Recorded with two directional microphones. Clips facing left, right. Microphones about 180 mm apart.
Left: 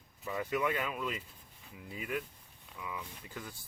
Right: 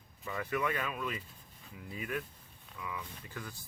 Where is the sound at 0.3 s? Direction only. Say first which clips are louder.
Left 1 dB; 15° left (ahead or behind).